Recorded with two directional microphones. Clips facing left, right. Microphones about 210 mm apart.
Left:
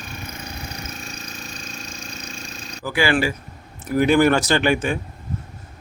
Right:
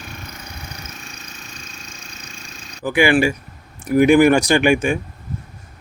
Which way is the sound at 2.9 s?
15° right (ahead or behind).